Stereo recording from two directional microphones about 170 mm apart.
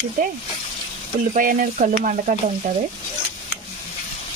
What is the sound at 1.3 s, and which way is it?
Speech, 55° right (ahead or behind).